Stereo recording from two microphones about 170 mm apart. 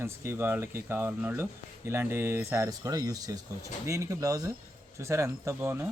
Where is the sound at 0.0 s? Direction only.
15° right (ahead or behind).